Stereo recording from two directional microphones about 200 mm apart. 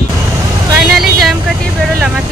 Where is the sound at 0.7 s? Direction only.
Centre (ahead or behind).